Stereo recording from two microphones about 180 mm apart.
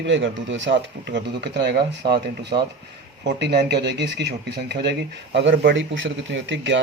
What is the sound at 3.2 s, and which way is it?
Speech, 70° right (ahead or behind).